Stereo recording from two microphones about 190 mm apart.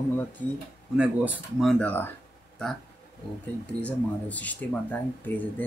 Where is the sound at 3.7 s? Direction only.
5° left (ahead or behind).